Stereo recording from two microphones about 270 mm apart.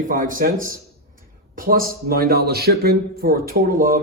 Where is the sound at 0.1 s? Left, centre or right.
Right.